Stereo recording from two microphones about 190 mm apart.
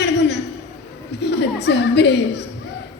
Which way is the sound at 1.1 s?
60° left (ahead or behind).